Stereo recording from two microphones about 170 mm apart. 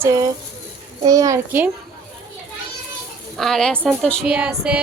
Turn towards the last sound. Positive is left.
turn(degrees=-5)  # may be behind; listen again after turning